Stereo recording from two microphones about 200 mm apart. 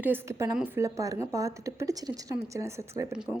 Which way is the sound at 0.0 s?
10° right (ahead or behind).